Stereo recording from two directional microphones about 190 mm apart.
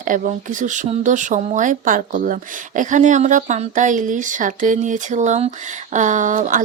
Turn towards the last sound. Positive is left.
turn(degrees=-45)  # may be behind; listen again after turning